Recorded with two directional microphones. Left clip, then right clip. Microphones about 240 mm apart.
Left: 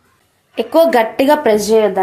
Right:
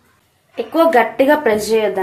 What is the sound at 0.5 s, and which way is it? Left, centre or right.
Speech, left.